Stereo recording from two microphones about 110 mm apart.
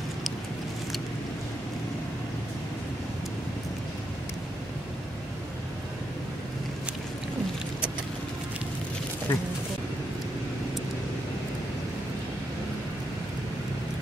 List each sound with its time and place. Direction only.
9.3 s speech: 20° left (ahead or behind)